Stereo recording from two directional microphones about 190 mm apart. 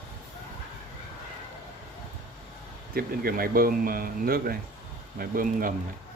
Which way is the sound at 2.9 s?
50° right (ahead or behind).